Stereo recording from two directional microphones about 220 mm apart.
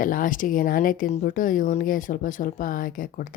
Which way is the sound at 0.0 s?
40° left (ahead or behind).